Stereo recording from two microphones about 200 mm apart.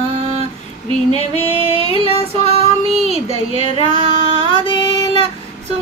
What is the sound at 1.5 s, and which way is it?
Female singing, 25° right (ahead or behind).